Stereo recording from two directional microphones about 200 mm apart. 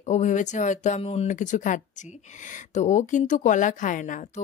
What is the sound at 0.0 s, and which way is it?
Speech, 35° left (ahead or behind).